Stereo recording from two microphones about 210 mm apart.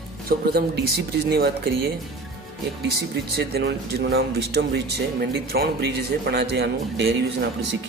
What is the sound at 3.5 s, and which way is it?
Speech, 50° right (ahead or behind).